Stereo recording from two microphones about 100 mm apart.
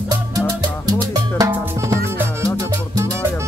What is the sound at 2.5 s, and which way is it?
Music, 35° right (ahead or behind).